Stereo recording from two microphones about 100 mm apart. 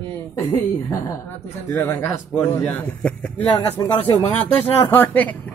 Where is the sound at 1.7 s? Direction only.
20° left (ahead or behind).